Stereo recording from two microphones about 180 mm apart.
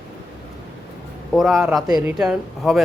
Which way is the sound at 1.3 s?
Centre (ahead or behind).